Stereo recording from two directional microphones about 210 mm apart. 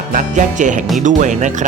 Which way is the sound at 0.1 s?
35° right (ahead or behind).